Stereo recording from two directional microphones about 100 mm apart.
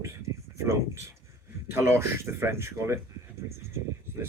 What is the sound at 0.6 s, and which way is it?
Speech, 30° right (ahead or behind).